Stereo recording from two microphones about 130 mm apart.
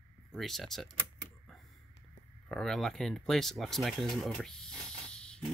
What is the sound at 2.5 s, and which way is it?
Speech, 5° left (ahead or behind).